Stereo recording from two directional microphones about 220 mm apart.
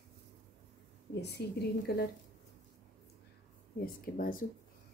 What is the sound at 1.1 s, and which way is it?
Speech, 50° left (ahead or behind).